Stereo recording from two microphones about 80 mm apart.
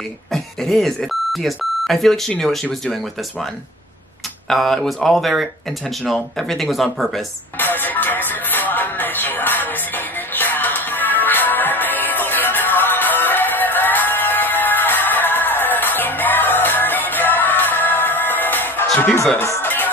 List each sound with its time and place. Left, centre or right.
0.3 s speech: centre
4.5 s speech: centre
7.5 s music: left